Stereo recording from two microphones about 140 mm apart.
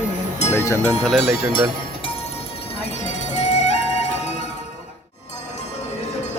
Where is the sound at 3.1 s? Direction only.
55° left (ahead or behind).